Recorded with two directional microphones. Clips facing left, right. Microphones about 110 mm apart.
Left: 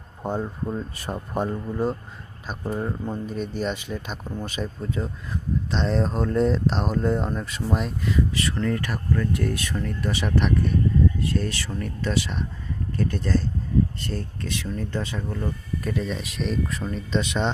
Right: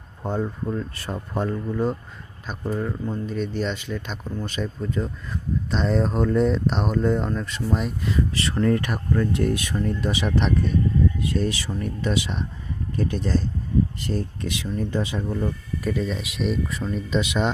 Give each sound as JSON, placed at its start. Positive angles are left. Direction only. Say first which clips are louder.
{"t": 0.2, "sound": "speech", "louder": "right 1 dB", "side_deg": 10}
{"t": 3.2, "sound": "speech", "louder": "right 1 dB", "side_deg": 5}
{"t": 8.4, "sound": "speech", "louder": "right 4 dB", "side_deg": -30}